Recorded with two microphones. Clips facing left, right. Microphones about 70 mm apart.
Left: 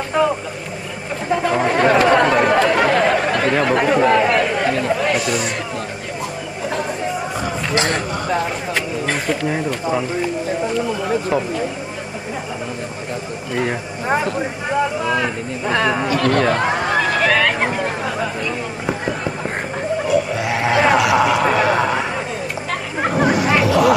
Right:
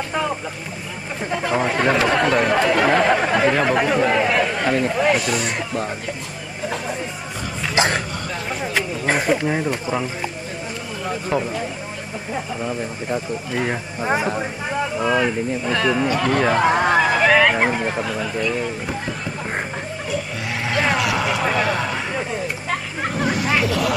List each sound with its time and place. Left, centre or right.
0.2 s speech: centre
1.3 s chatter: centre
4.9 s speech: centre
7.7 s a sound: centre
9.0 s speech: centre
11.2 s speech: centre
13.5 s speech: centre
15.6 s speech: centre
16.1 s speech: centre
18.0 s speech: centre
20.1 s a sound: centre
22.9 s hubbub: centre
23.2 s a sound: centre